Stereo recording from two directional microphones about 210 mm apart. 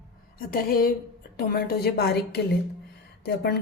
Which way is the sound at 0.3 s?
45° left (ahead or behind).